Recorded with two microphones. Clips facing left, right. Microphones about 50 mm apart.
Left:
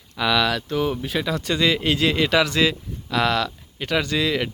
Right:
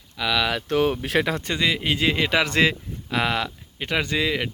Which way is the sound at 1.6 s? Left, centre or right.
Centre.